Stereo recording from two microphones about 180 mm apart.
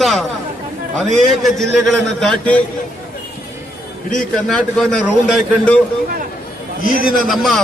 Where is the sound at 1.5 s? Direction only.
Centre (ahead or behind).